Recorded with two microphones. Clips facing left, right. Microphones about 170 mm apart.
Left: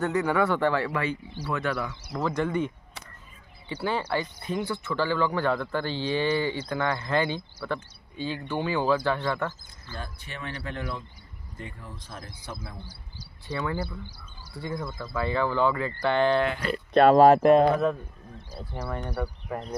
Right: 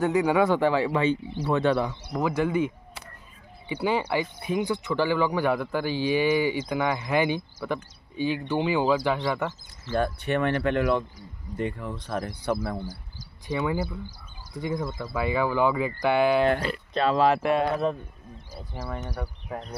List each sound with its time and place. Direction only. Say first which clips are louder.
0.0 s speech: right 3 dB; 15° right (ahead or behind)
1.9 s speech: right 2 dB; 15° right (ahead or behind)
9.8 s speech: right 14 dB; 65° right (ahead or behind); by 11.1 s 80° right
11.5 s speech: right 11 dB; 70° right (ahead or behind)
13.5 s speech: right 3 dB; 20° right (ahead or behind)
16.9 s speech: left 6 dB; 50° left (ahead or behind)